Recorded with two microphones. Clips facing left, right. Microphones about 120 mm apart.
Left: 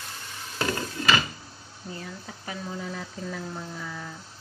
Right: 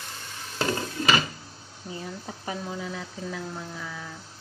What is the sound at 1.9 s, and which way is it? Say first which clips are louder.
Speech: right 2 dB; 20° right (ahead or behind).